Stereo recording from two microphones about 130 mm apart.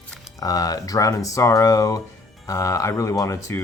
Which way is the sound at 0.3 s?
30° left (ahead or behind).